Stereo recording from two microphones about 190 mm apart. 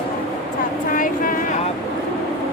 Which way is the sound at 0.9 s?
45° left (ahead or behind).